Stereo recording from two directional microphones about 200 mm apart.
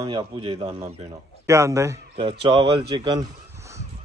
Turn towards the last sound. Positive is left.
turn(degrees=-20)  # may be behind; listen again after turning